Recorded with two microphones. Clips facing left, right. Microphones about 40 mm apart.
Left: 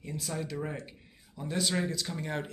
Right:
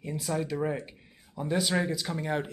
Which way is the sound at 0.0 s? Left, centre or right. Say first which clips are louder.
Right 5 dB; centre.